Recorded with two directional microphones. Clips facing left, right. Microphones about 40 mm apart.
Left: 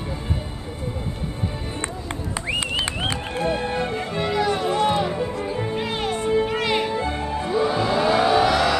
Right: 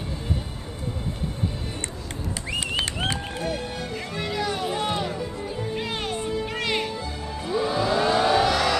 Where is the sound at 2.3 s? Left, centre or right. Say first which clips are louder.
Left 3 dB; left.